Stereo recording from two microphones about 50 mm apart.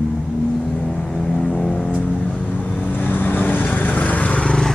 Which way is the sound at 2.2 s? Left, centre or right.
Left.